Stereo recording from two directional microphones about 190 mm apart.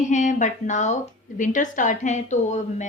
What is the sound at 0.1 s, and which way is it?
A woman's voice, 40° left (ahead or behind).